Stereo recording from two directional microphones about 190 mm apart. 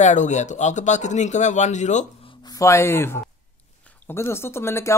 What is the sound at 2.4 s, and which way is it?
Speech, 20° left (ahead or behind).